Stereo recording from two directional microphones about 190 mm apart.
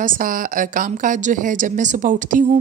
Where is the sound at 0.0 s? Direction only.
45° right (ahead or behind).